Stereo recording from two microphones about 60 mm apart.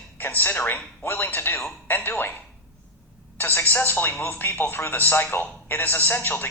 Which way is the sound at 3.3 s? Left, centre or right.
Left.